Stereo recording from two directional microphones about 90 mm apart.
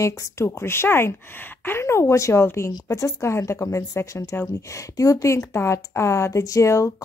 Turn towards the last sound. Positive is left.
turn(degrees=35)  # may be behind; listen again after turning